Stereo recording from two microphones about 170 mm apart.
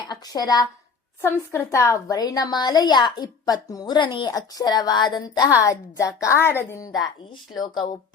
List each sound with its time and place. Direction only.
0.1 s a woman's voice: 25° left (ahead or behind)